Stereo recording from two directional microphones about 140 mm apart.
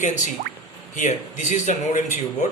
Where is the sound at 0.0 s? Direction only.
60° left (ahead or behind).